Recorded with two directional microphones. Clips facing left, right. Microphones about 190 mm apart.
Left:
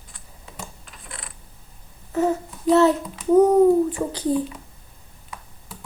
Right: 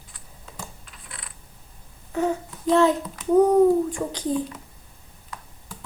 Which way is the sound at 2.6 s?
5° left (ahead or behind).